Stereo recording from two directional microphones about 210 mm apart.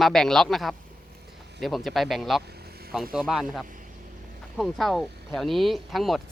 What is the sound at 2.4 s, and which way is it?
Vehicle, 50° right (ahead or behind).